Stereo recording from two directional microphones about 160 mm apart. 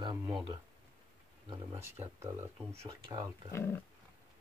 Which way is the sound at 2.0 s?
15° right (ahead or behind).